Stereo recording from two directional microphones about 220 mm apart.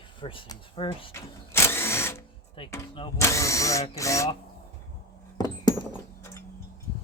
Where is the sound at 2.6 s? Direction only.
25° left (ahead or behind).